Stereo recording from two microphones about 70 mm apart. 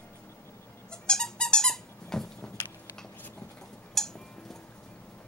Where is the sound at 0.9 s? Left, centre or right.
Centre.